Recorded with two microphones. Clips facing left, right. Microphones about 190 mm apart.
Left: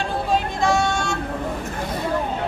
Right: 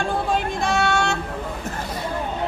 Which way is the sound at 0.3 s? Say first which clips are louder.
Left 6 dB; 60° right (ahead or behind).